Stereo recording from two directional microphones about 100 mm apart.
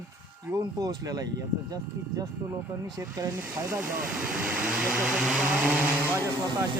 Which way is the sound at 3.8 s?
15° right (ahead or behind).